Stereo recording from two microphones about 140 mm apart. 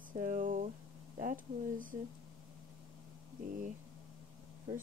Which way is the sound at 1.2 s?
75° right (ahead or behind).